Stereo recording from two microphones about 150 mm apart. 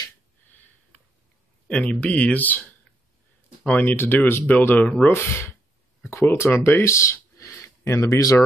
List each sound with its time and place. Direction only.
1.7 s speech: 10° left (ahead or behind)